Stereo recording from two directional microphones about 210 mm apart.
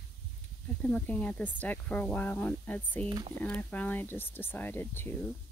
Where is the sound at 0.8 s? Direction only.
5° left (ahead or behind).